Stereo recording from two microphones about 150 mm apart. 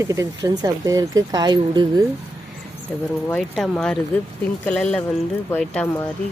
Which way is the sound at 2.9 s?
10° left (ahead or behind).